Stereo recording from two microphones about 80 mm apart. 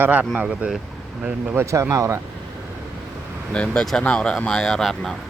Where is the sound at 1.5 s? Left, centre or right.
Right.